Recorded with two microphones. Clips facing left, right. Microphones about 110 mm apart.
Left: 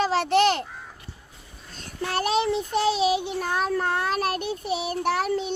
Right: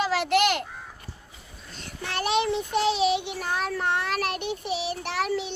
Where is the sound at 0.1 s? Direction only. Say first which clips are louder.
Left 2 dB; 35° left (ahead or behind).